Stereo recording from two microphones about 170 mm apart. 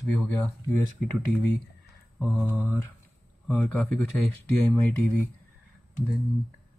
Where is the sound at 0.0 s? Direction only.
5° left (ahead or behind).